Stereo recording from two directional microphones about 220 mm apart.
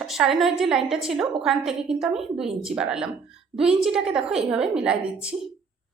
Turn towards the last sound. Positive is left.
turn(degrees=-5)  # may be behind; listen again after turning